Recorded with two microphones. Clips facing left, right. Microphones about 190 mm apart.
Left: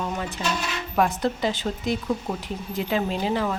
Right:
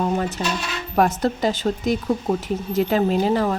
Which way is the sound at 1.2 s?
45° right (ahead or behind).